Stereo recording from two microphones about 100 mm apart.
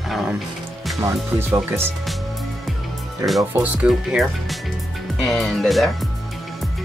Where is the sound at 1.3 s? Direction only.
25° right (ahead or behind).